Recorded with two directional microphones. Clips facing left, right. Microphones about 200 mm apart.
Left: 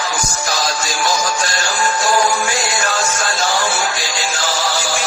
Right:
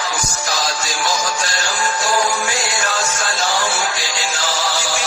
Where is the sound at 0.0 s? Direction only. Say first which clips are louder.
Left 2 dB; 45° left (ahead or behind).